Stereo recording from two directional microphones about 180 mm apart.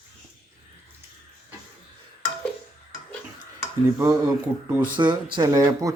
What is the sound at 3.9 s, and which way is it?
Speech, 20° right (ahead or behind).